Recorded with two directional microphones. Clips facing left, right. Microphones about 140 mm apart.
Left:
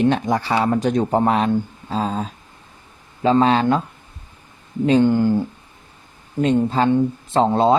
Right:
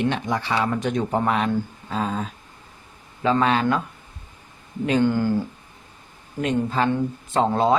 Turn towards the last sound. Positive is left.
turn(degrees=25)  # may be behind; listen again after turning